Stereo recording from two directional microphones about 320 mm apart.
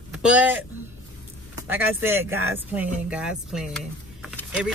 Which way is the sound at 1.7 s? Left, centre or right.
Centre.